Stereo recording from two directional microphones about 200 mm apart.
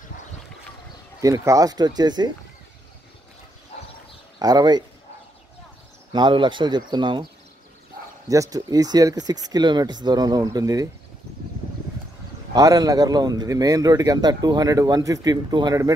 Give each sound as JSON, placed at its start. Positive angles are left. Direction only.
{"t": 1.2, "sound": "a man's voice", "side_deg": -15}
{"t": 4.4, "sound": "a man's voice", "side_deg": -20}
{"t": 6.1, "sound": "a man's voice", "side_deg": -25}
{"t": 8.3, "sound": "a man's voice", "side_deg": -15}
{"t": 12.5, "sound": "a man's voice", "side_deg": -20}